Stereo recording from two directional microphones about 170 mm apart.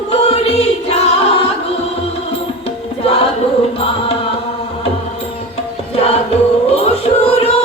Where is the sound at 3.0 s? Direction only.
35° left (ahead or behind).